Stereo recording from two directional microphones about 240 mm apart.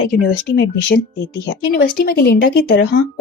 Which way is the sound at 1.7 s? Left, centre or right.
Left.